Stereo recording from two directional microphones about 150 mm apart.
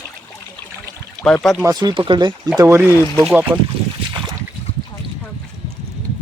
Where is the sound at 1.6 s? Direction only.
30° right (ahead or behind).